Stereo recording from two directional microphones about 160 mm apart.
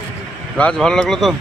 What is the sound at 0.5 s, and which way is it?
Speech, 5° left (ahead or behind).